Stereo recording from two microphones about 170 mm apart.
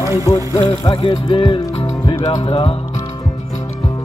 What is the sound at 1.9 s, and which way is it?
Music, 20° left (ahead or behind).